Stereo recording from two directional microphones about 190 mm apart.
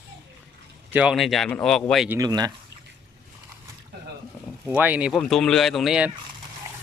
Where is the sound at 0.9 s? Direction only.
5° right (ahead or behind).